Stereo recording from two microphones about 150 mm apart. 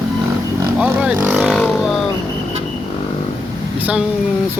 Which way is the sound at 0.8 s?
10° right (ahead or behind).